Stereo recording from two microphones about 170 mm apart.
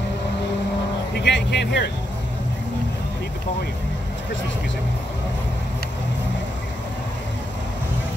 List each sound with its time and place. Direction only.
1.2 s speech: 90° left